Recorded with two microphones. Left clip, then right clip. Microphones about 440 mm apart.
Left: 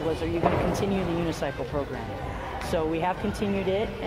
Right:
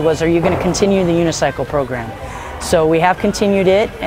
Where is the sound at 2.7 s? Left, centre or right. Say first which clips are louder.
Right 15 dB; right.